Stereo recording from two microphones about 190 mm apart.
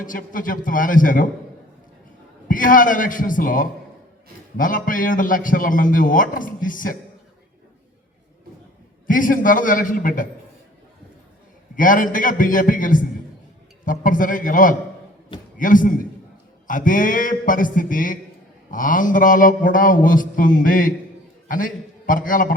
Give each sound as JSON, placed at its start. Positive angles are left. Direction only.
{"t": 0.0, "sound": "a man's voice", "side_deg": 45}
{"t": 2.5, "sound": "a man's voice", "side_deg": 45}
{"t": 9.0, "sound": "a man's voice", "side_deg": 45}
{"t": 11.8, "sound": "a man's voice", "side_deg": 45}